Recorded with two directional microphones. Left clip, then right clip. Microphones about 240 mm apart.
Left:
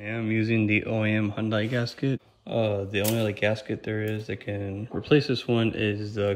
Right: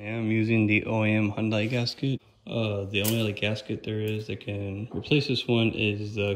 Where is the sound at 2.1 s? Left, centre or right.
Left.